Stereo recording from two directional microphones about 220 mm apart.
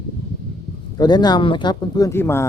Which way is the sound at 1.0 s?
20° left (ahead or behind).